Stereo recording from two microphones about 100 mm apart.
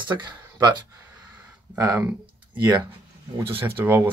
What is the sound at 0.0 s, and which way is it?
Speech, 50° right (ahead or behind).